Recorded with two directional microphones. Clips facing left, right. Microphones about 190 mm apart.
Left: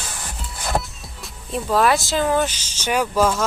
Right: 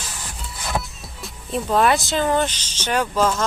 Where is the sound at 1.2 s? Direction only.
Centre (ahead or behind).